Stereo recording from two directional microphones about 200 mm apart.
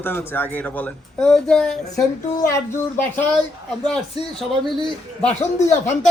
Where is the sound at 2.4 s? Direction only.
15° left (ahead or behind).